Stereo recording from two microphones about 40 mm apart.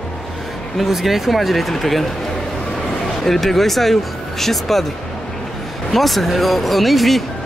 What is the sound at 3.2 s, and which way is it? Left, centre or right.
Speech, centre.